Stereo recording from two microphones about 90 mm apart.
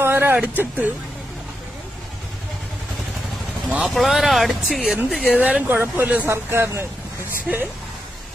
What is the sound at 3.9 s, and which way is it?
Speech, centre (ahead or behind).